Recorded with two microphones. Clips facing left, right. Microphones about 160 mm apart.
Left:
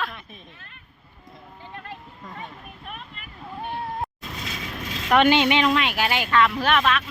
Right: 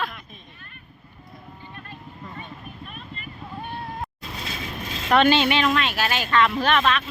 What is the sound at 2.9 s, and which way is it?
Clip-clop, 85° left.